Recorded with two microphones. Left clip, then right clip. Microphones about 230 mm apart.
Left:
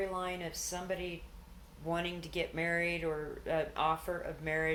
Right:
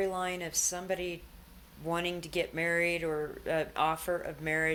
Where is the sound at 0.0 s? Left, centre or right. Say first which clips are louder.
Right 4 dB; right.